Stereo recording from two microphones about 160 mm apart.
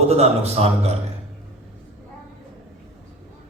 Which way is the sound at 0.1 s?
40° right (ahead or behind).